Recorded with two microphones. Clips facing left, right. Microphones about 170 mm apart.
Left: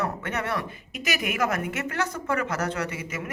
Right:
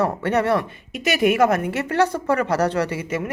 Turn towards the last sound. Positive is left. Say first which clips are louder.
# right 8 dB
turn(degrees=-30)  # may be behind; listen again after turning